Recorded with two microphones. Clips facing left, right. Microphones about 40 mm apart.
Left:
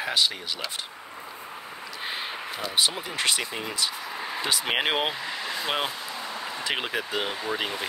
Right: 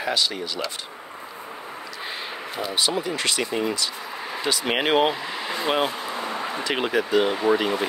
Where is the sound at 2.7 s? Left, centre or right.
Centre.